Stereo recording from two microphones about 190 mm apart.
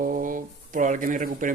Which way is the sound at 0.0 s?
45° right (ahead or behind).